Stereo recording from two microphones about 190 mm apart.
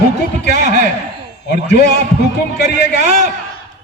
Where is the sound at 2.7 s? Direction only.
40° right (ahead or behind).